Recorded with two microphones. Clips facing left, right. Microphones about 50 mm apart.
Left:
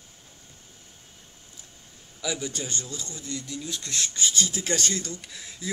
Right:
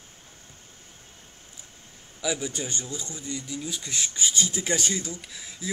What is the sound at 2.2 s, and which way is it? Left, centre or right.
Speech, centre.